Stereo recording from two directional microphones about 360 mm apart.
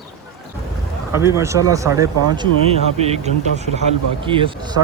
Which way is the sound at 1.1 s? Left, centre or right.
Centre.